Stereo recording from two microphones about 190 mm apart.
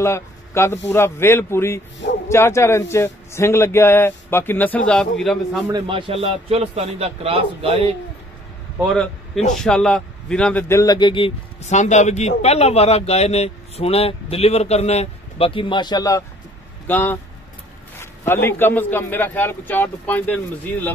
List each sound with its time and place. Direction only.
0.0 s a man's voice: 15° left (ahead or behind)
5.7 s a man's voice: 25° right (ahead or behind)
8.9 s a man's voice: 5° left (ahead or behind)